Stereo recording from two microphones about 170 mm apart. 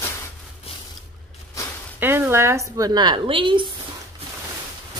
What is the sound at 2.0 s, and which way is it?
A woman's voice, 15° right (ahead or behind).